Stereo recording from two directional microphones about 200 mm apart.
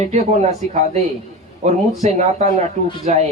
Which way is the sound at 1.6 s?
35° right (ahead or behind).